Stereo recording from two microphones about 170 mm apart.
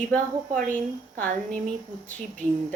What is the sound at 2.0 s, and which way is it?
Speech, 10° left (ahead or behind).